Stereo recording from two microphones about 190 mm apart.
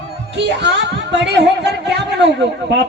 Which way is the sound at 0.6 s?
65° right (ahead or behind).